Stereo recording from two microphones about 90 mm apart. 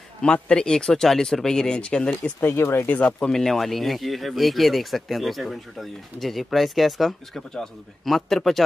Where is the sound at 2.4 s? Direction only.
30° left (ahead or behind).